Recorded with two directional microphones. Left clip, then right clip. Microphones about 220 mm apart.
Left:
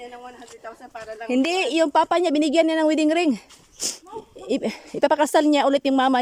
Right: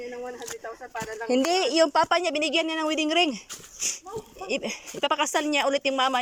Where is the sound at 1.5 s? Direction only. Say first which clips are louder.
Left 1 dB; 10° left (ahead or behind).